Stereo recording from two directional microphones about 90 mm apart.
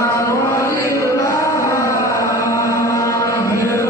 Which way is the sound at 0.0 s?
30° left (ahead or behind).